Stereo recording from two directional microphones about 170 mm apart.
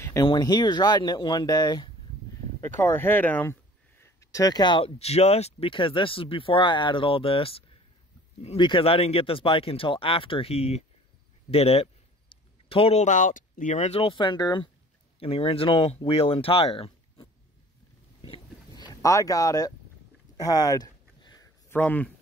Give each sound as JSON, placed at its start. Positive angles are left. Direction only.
{"t": 0.0, "sound": "speech", "side_deg": 20}
{"t": 2.6, "sound": "speech", "side_deg": 15}
{"t": 18.2, "sound": "a sound", "side_deg": 30}
{"t": 21.6, "sound": "speech", "side_deg": 10}